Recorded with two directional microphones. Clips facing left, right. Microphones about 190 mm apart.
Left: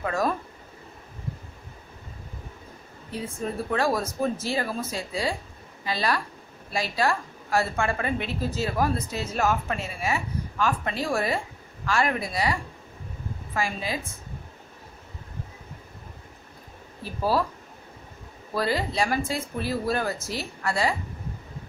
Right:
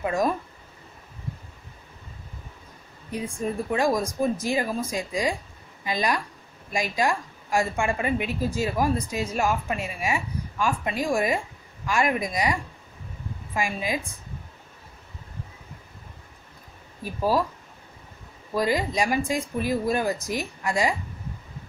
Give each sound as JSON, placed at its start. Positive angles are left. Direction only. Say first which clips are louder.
{"t": 0.0, "sound": "a woman's voice", "louder": "right 2 dB", "side_deg": -15}
{"t": 3.1, "sound": "a woman's voice", "louder": "right 2 dB", "side_deg": -15}
{"t": 17.0, "sound": "a woman's voice", "louder": "right 1 dB", "side_deg": -15}
{"t": 18.5, "sound": "a woman's voice", "louder": "right 2 dB", "side_deg": -15}